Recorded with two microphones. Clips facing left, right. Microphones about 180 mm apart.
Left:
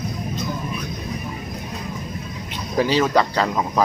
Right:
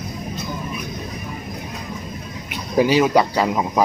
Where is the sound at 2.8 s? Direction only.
10° right (ahead or behind).